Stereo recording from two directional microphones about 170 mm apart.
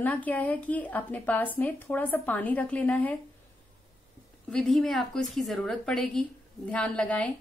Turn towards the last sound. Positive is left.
turn(degrees=5)  # may be behind; listen again after turning